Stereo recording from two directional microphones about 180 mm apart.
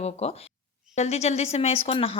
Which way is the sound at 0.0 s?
35° left (ahead or behind).